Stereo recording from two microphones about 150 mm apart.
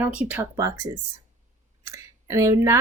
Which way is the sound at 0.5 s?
20° right (ahead or behind).